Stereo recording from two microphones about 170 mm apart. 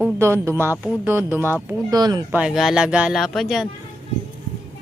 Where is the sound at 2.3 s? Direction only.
5° right (ahead or behind).